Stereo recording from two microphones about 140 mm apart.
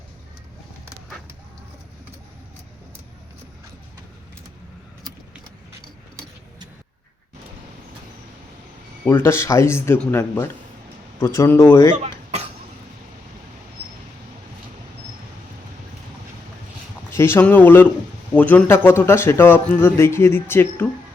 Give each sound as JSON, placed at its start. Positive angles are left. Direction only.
{"t": 9.0, "sound": "speech", "side_deg": 20}
{"t": 17.1, "sound": "speech", "side_deg": 20}